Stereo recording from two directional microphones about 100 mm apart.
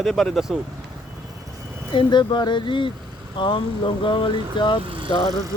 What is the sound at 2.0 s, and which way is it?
Speech, 50° left (ahead or behind).